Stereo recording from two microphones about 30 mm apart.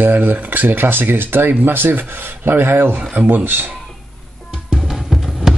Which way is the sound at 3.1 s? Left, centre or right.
Right.